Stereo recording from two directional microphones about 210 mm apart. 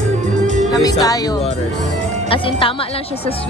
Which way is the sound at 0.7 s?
20° left (ahead or behind).